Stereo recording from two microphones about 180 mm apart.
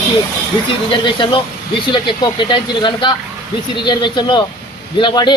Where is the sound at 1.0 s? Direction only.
25° left (ahead or behind).